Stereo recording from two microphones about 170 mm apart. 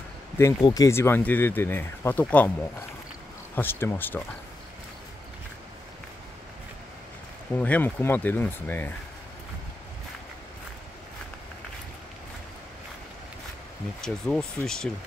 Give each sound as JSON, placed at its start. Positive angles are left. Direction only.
{"t": 0.4, "sound": "speech", "side_deg": 20}
{"t": 3.5, "sound": "speech", "side_deg": 15}
{"t": 7.5, "sound": "speech", "side_deg": 10}
{"t": 14.0, "sound": "speech", "side_deg": 0}